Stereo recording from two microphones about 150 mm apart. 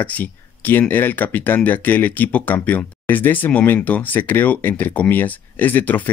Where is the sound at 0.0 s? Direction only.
10° left (ahead or behind).